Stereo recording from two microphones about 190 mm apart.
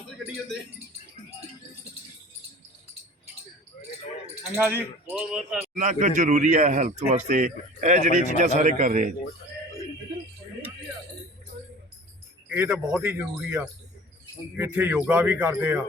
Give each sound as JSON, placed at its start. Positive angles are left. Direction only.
{"t": 4.5, "sound": "speech", "side_deg": -10}
{"t": 5.7, "sound": "a man's voice", "side_deg": -40}
{"t": 12.5, "sound": "speech", "side_deg": -5}